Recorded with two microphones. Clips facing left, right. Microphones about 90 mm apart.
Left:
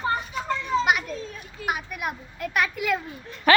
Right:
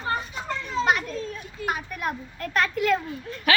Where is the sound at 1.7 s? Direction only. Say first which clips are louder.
Even; 10° left (ahead or behind).